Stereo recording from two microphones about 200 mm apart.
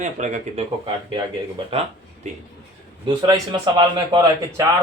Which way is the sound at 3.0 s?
20° right (ahead or behind).